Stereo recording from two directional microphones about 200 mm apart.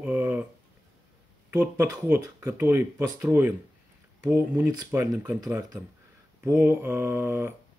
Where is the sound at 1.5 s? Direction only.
10° right (ahead or behind).